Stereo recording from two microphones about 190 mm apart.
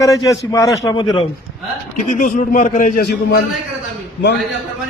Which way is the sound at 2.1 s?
40° left (ahead or behind).